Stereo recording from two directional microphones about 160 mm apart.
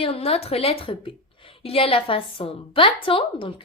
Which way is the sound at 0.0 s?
35° left (ahead or behind).